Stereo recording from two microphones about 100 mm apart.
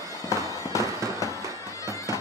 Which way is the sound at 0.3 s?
35° left (ahead or behind).